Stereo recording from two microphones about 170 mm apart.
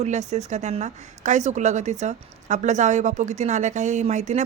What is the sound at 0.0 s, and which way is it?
A woman's voice, 40° right (ahead or behind).